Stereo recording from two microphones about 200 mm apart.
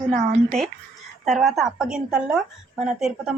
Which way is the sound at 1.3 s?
Centre (ahead or behind).